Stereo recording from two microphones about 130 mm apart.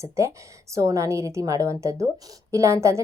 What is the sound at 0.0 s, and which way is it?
A woman's voice, 20° right (ahead or behind).